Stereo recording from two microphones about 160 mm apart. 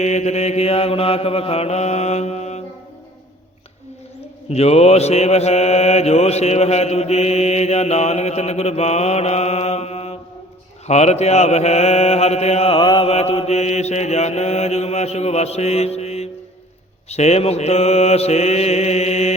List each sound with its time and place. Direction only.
0.0 s mantra: 45° left (ahead or behind)
4.4 s mantra: 40° left (ahead or behind)